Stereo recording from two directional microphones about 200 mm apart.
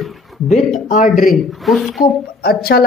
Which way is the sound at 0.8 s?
40° left (ahead or behind).